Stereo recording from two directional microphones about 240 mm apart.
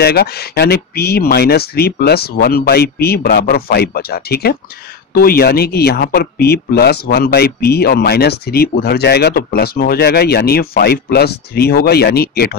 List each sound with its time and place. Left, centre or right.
0.0 s speech: left